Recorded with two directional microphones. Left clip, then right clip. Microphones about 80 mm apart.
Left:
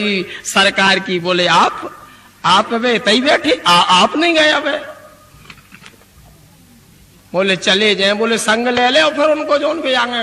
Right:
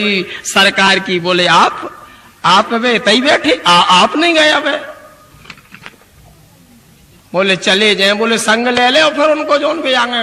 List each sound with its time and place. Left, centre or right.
0.0 s a man's voice: right
0.4 s a man's voice: centre
0.7 s a man's voice: right
1.9 s a sound: right
2.4 s a man's voice: right
3.5 s snicker: centre
3.8 s a man's voice: right
5.5 s a sound: right
7.3 s a man's voice: right
8.7 s a man's voice: right
9.0 s a man's voice: right
9.8 s snicker: centre